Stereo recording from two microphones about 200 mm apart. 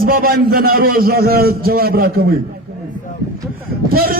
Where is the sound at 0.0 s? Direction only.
45° right (ahead or behind).